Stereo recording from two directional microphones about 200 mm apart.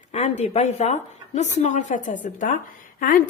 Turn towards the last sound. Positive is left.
turn(degrees=45)  # may be behind; listen again after turning